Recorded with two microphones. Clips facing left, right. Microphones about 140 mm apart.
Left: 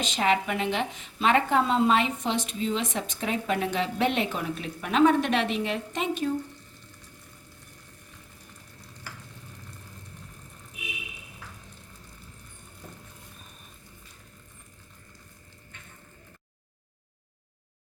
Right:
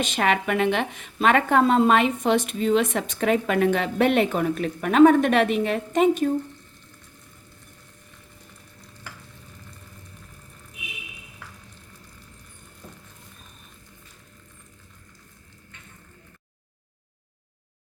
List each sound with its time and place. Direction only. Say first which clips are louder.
0.0 s speech: right 2 dB; 60° right (ahead or behind)